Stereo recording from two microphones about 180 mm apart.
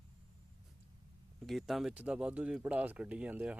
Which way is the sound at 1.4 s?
Centre (ahead or behind).